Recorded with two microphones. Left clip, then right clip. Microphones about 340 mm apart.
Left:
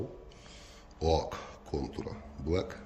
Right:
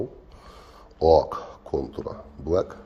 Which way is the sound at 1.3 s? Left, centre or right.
Centre.